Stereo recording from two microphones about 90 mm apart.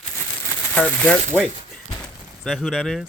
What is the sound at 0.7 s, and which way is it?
Speech, 15° left (ahead or behind).